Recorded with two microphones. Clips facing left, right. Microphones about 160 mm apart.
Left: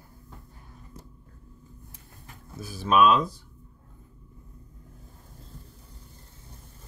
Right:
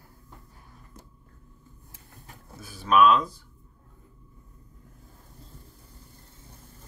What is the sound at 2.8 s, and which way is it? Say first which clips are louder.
Speech: right 1 dB; 20° left (ahead or behind).